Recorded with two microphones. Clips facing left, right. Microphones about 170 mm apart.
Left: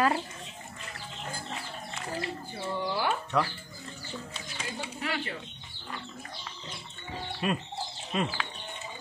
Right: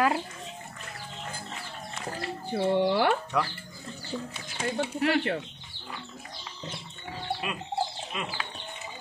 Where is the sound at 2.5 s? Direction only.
65° right (ahead or behind).